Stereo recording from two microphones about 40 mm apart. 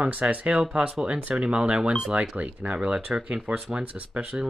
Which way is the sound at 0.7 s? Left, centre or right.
Right.